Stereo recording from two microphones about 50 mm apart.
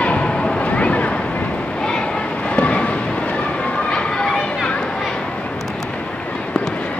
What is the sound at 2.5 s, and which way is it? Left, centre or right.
Vehicle, left.